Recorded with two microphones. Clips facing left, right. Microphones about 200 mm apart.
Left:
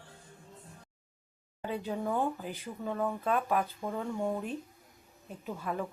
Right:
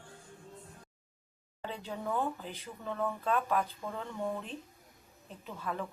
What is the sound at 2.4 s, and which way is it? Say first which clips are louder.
Speech: left 5 dB; 15° left (ahead or behind).